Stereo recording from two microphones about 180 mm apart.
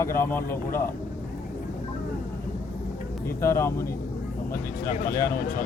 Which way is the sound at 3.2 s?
15° left (ahead or behind).